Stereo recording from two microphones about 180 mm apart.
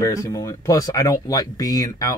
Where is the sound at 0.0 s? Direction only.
15° left (ahead or behind).